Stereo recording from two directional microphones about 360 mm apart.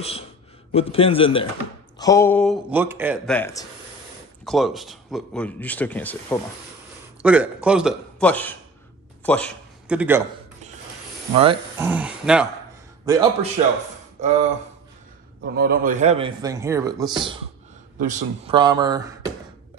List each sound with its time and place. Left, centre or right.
0.0 s a man's voice: centre
11.3 s a man's voice: centre
14.2 s a sound: centre
15.5 s a man's voice: right; by 19.3 s centre